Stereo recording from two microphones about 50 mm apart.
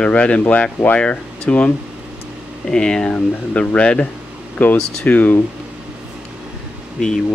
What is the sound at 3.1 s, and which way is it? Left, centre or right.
Speech, left.